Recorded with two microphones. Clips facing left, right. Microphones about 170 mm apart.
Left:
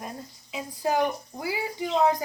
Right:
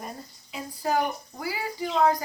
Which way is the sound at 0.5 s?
15° left (ahead or behind).